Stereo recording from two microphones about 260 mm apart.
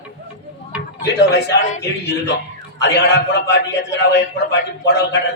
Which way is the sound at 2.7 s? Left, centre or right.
Left.